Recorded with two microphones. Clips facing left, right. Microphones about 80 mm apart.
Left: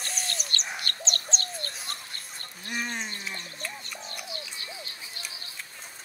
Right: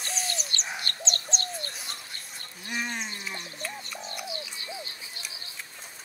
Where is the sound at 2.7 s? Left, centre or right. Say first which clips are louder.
Even; centre.